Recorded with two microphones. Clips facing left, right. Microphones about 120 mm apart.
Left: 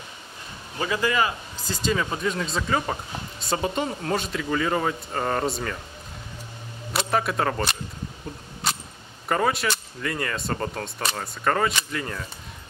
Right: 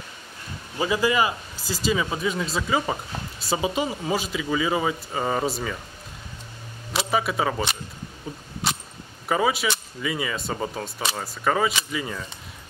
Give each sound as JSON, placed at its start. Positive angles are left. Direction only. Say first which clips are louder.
{"t": 0.7, "sound": "speech", "louder": "right 2 dB", "side_deg": -10}
{"t": 6.9, "sound": "speech", "louder": "even", "side_deg": 0}
{"t": 9.3, "sound": "speech", "louder": "right 1 dB", "side_deg": 0}